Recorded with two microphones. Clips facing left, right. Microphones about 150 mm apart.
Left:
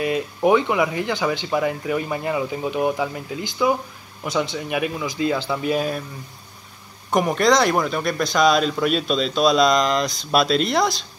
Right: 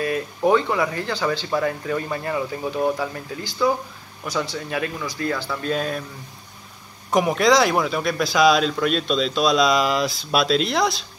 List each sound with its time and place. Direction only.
0.0 s speech: 15° left (ahead or behind)
7.1 s speech: centre (ahead or behind)